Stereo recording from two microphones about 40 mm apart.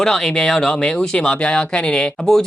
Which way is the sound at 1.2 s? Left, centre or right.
Left.